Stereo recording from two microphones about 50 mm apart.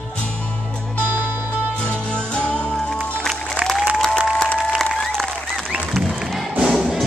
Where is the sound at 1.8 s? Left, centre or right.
Left.